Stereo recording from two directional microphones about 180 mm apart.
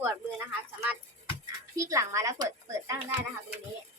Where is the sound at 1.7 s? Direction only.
20° right (ahead or behind).